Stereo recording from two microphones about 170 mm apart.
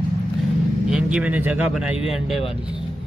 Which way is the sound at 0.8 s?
5° right (ahead or behind).